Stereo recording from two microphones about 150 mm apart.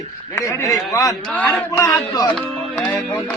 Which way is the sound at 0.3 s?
20° left (ahead or behind).